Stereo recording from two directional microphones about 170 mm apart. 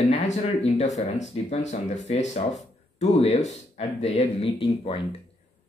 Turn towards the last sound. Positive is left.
turn(degrees=35)  # may be behind; listen again after turning